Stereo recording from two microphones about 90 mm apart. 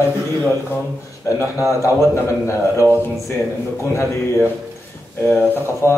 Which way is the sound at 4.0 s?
25° left (ahead or behind).